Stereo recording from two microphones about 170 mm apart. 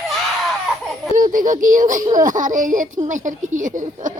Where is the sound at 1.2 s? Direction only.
50° right (ahead or behind).